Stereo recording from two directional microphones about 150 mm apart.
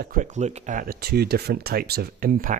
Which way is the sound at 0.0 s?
60° right (ahead or behind).